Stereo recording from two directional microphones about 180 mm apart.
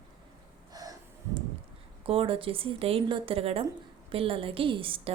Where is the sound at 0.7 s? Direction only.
20° right (ahead or behind).